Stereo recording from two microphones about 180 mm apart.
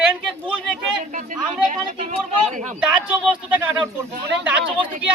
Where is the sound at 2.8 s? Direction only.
5° right (ahead or behind).